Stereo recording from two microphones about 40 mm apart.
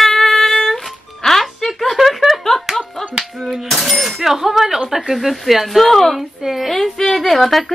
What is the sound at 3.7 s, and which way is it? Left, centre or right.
Speech, centre.